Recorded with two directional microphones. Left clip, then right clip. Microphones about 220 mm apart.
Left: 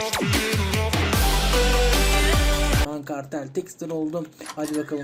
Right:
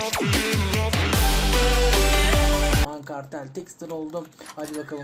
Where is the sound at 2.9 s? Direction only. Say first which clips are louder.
Left 3 dB; 20° left (ahead or behind).